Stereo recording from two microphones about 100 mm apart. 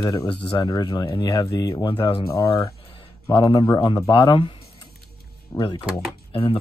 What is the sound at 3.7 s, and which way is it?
Speech, 50° left (ahead or behind).